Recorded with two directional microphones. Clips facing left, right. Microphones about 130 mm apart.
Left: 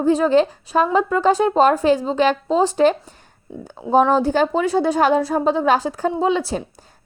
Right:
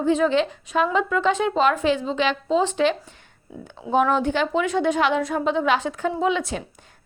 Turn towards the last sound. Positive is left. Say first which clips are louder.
# left 3 dB
turn(degrees=35)  # may be behind; listen again after turning